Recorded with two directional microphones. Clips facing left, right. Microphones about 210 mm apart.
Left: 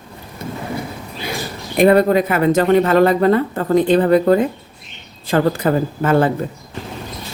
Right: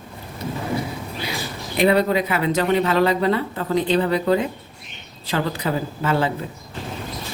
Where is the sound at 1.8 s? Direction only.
50° left (ahead or behind).